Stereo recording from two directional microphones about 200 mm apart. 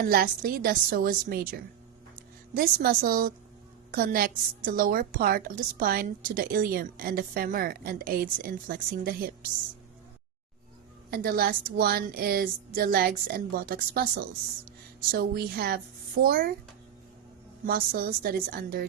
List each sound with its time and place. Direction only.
0.0 s a woman's voice: 50° right (ahead or behind)
11.1 s a woman's voice: 50° right (ahead or behind)
17.7 s a woman's voice: 50° right (ahead or behind)